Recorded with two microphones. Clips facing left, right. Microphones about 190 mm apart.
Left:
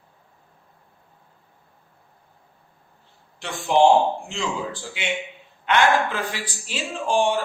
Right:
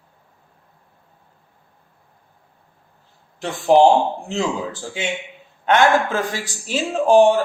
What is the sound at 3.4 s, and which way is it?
Speech, 40° right (ahead or behind).